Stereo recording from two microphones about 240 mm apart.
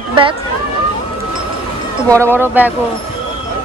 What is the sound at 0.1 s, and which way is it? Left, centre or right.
Speech, right.